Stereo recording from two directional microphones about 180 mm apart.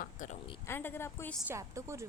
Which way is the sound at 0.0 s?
45° left (ahead or behind).